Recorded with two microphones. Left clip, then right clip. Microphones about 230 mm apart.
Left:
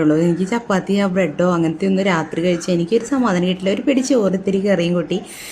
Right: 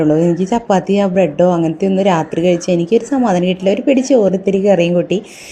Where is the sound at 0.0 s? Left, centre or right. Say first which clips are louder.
Right 3 dB; centre.